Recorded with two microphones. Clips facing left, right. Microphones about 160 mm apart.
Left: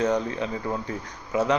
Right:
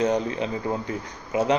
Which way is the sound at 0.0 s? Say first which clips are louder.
Right 1 dB; 20° right (ahead or behind).